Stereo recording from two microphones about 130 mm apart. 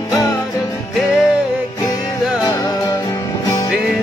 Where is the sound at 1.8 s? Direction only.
30° left (ahead or behind).